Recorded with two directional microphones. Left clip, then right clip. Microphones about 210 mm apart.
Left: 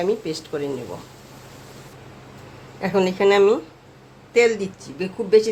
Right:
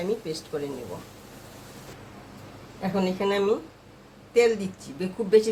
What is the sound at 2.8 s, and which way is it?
Speech, 25° left (ahead or behind).